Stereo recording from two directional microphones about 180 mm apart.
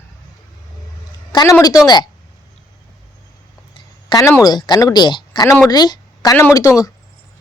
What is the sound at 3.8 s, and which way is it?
A woman's voice, 20° left (ahead or behind).